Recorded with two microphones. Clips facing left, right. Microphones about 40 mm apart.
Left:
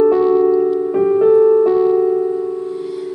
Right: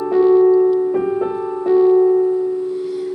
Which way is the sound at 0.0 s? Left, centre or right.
Centre.